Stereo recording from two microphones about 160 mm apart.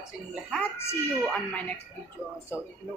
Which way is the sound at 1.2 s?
10° left (ahead or behind).